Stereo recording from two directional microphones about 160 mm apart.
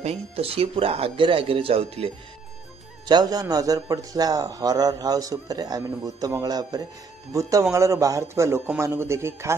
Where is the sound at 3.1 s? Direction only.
25° right (ahead or behind).